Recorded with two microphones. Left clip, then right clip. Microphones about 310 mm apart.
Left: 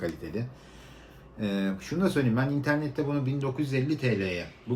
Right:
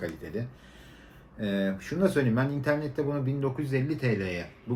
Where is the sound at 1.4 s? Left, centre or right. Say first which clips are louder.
Right 1 dB; centre.